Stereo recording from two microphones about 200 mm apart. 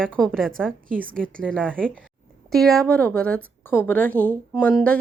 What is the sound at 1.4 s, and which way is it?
A woman's voice, 5° left (ahead or behind).